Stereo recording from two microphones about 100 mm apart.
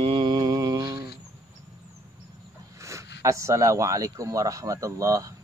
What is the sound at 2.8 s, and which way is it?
Speech, 30° right (ahead or behind).